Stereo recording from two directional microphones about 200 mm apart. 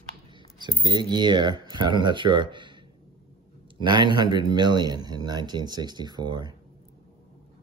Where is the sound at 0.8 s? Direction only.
20° right (ahead or behind).